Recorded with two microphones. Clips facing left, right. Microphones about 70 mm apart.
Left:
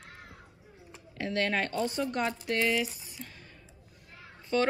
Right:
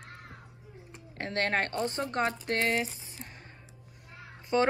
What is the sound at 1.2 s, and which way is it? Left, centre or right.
A child's voice, right.